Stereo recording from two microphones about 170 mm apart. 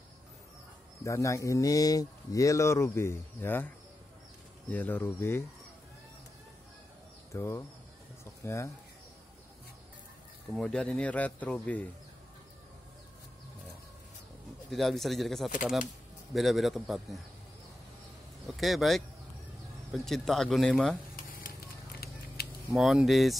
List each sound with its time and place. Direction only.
1.0 s speech: 20° left (ahead or behind)
7.3 s speech: 15° left (ahead or behind)
10.5 s speech: 5° left (ahead or behind)
14.7 s speech: centre (ahead or behind)
18.6 s speech: centre (ahead or behind)
22.4 s a sound: 65° left (ahead or behind)
22.8 s speech: centre (ahead or behind)